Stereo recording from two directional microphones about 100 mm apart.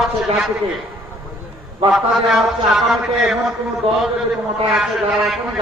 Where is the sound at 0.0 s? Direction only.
5° right (ahead or behind).